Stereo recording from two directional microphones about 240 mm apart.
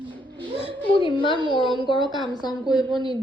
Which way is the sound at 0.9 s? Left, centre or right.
Left.